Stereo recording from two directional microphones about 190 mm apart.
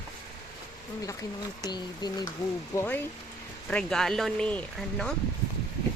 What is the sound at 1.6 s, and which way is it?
Speech, 20° left (ahead or behind).